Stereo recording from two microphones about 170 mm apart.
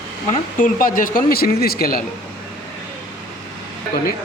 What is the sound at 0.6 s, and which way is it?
A man's voice, 55° left (ahead or behind).